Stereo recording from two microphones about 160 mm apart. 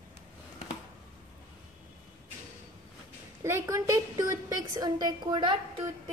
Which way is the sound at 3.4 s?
20° right (ahead or behind).